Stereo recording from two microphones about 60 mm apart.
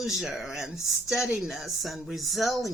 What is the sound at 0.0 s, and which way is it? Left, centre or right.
Speech, centre.